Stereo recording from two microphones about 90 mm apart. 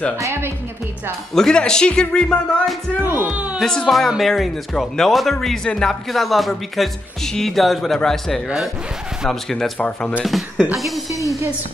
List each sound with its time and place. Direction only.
0.2 s speech: 25° right (ahead or behind)
1.3 s speech: 5° left (ahead or behind)
3.0 s speech: 25° right (ahead or behind)
3.5 s speech: 5° left (ahead or behind)
9.8 s speech: 15° left (ahead or behind)
10.2 s speech: centre (ahead or behind)
11.1 s music: 35° right (ahead or behind)